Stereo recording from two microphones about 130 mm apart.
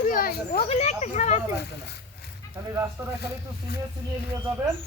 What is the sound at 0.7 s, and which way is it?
Speech, 60° left (ahead or behind).